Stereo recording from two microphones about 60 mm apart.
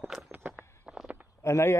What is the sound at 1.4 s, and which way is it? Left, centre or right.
Speech, left.